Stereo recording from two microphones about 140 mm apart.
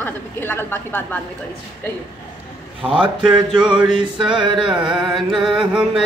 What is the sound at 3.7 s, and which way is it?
Music, 5° right (ahead or behind).